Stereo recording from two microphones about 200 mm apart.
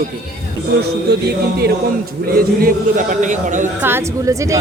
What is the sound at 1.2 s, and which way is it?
Speech, 50° right (ahead or behind).